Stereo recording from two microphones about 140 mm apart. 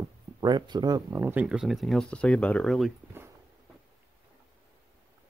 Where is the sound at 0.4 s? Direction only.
30° right (ahead or behind).